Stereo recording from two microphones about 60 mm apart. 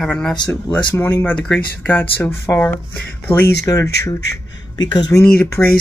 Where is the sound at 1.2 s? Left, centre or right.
Centre.